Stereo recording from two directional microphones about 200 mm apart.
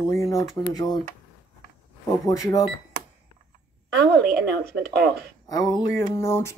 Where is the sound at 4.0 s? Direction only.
55° right (ahead or behind).